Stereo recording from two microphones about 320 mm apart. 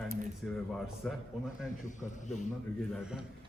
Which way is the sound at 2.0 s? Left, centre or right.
Left.